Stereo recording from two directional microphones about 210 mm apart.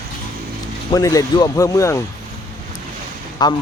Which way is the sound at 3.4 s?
20° left (ahead or behind).